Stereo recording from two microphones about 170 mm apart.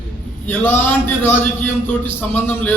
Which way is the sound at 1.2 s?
10° left (ahead or behind).